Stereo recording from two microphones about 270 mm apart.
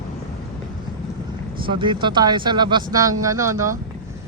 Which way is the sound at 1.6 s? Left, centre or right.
Centre.